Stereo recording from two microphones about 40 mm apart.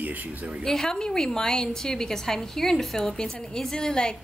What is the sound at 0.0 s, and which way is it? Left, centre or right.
Speech, right.